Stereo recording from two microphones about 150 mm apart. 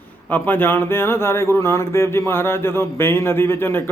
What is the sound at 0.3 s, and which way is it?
Speech, 10° left (ahead or behind).